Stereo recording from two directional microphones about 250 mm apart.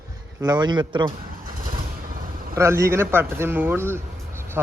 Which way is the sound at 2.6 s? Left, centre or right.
Centre.